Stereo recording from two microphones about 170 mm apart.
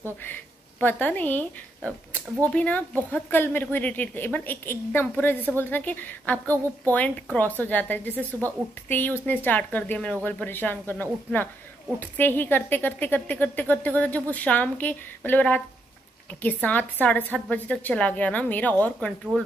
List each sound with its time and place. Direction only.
0.2 s speech: 10° left (ahead or behind)
2.4 s a woman's voice: 10° left (ahead or behind)
6.4 s a woman's voice: 20° right (ahead or behind)
6.9 s a woman's voice: 10° left (ahead or behind)